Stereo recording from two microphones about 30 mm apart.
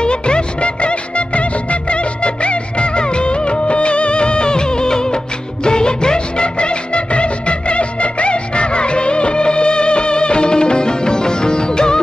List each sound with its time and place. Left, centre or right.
0.0 s music of bollywood: left